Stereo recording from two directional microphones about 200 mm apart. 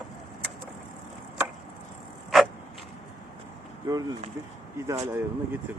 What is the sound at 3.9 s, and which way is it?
Speech, 20° right (ahead or behind).